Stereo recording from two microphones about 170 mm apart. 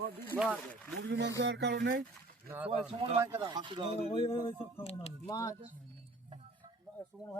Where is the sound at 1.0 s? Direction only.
90° right.